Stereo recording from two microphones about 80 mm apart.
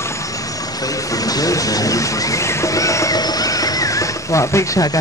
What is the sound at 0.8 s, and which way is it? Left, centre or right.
Speech, left.